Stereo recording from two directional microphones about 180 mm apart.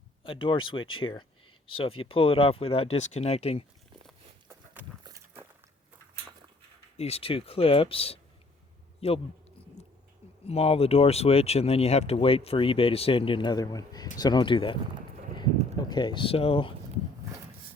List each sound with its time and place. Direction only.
0.2 s speech: 30° left (ahead or behind)
4.4 s a sound: 10° right (ahead or behind)
5.0 s walk: 15° right (ahead or behind)
6.9 s speech: 35° left (ahead or behind)
9.0 s a sound: 35° left (ahead or behind)
10.4 s speech: 35° left (ahead or behind)
15.8 s speech: 25° left (ahead or behind)